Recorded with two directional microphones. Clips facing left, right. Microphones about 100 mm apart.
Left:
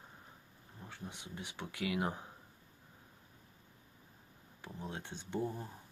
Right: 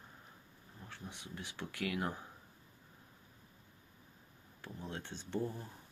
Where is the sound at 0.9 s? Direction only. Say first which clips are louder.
Left 1 dB; 20° left (ahead or behind).